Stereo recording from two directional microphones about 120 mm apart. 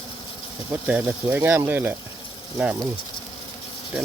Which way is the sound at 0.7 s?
15° right (ahead or behind).